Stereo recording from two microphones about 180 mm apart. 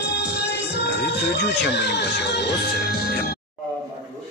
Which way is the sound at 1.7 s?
70° left (ahead or behind).